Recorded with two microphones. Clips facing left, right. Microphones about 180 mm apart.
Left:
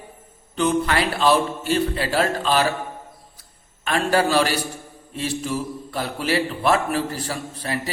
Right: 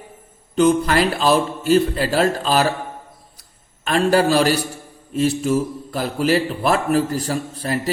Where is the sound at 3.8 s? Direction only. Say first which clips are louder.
Right 4 dB; 40° right (ahead or behind).